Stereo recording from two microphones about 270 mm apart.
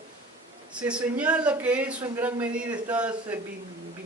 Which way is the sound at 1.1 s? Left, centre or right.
Centre.